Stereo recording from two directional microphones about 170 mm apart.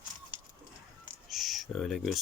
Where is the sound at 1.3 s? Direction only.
Centre (ahead or behind).